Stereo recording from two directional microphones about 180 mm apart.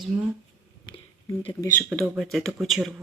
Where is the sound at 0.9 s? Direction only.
25° left (ahead or behind).